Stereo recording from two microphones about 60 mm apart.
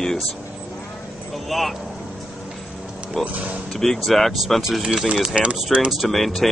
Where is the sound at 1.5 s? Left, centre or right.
Centre.